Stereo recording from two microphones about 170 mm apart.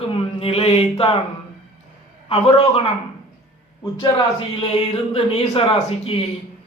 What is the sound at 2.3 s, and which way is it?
Speech, 35° left (ahead or behind).